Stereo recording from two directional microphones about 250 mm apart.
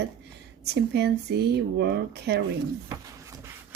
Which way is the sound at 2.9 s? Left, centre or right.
Centre.